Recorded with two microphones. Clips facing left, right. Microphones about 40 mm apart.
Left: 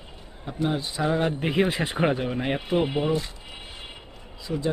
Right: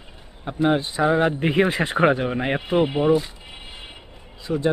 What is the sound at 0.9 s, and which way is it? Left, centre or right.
Speech, centre.